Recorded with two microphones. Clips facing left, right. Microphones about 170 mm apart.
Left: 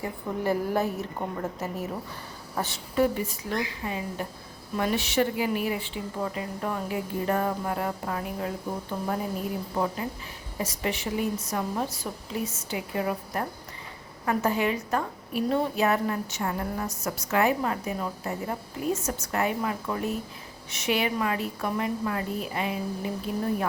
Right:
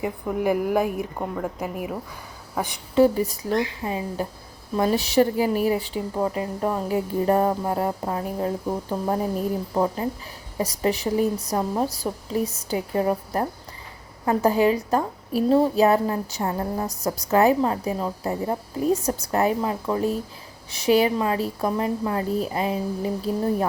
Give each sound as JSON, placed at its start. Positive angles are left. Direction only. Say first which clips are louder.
{"t": 0.0, "sound": "a woman's voice", "louder": "right 5 dB", "side_deg": -10}
{"t": 2.9, "sound": "a woman's voice", "louder": "right 7 dB", "side_deg": -35}